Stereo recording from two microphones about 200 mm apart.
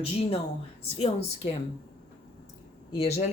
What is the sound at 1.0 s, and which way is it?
Speech, 30° left (ahead or behind).